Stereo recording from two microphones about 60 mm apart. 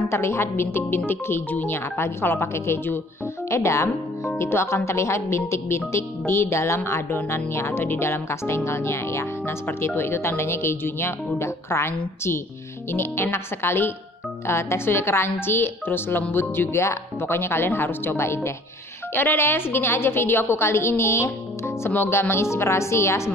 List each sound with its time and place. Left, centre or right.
0.1 s speech: left